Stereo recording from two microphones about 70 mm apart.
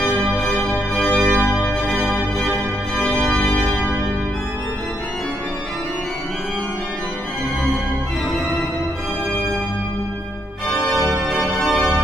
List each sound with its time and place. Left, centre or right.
0.1 s music: centre
10.7 s organ: centre